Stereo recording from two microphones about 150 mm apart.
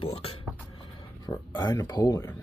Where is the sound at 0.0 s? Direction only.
40° left (ahead or behind).